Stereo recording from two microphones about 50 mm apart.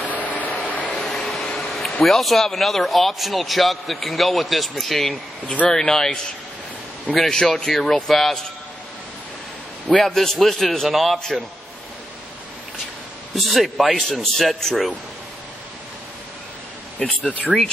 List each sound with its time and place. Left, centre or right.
0.0 s vehicle: left
0.9 s a sound: centre
2.0 s a man's voice: centre
7.2 s speech: centre
9.8 s a man's voice: centre
13.3 s a man's voice: centre
17.5 s speech: right